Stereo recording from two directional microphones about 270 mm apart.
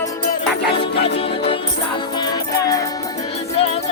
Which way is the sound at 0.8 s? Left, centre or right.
Left.